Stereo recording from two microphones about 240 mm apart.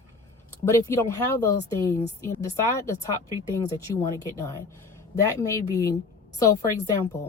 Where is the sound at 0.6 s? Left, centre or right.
Centre.